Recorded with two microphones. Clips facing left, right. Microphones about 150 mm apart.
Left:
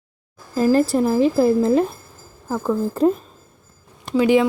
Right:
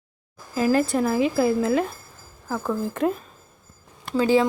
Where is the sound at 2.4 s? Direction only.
5° left (ahead or behind).